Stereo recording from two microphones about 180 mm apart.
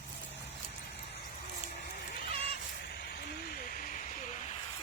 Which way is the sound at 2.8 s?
65° left (ahead or behind).